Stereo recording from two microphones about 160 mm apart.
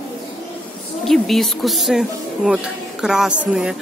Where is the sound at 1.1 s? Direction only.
Centre (ahead or behind).